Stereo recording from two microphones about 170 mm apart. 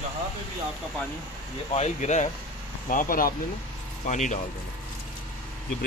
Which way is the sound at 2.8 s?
55° left (ahead or behind).